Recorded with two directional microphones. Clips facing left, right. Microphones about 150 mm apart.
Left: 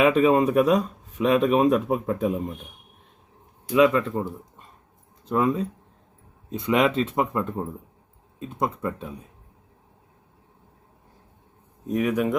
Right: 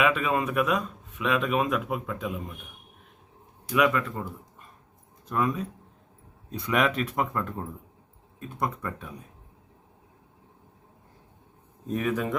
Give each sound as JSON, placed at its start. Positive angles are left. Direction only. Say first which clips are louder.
{"t": 0.0, "sound": "speech", "louder": "left 7 dB", "side_deg": 35}
{"t": 3.7, "sound": "speech", "louder": "left 5 dB", "side_deg": 25}
{"t": 11.9, "sound": "speech", "louder": "left 5 dB", "side_deg": 10}